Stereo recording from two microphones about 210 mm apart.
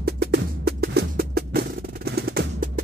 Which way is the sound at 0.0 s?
50° right (ahead or behind).